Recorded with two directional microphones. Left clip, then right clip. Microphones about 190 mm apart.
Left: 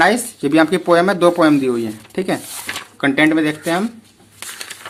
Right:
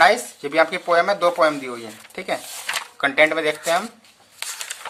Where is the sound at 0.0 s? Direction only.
15° left (ahead or behind).